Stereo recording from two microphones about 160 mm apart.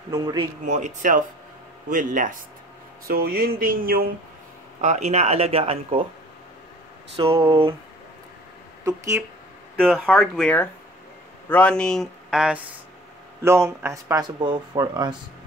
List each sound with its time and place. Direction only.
0.1 s speech: 25° right (ahead or behind)
0.7 s speech: 50° right (ahead or behind)
3.1 s speech: 70° right (ahead or behind)
4.8 s speech: 45° right (ahead or behind)
7.2 s speech: 35° right (ahead or behind)
9.8 s speech: 5° left (ahead or behind)
13.4 s speech: 15° right (ahead or behind)